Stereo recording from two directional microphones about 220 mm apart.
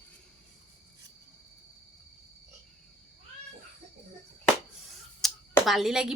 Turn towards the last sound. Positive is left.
turn(degrees=0)  # may be behind; listen again after turning